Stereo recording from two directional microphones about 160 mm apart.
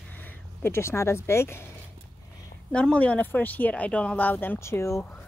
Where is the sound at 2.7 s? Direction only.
5° left (ahead or behind).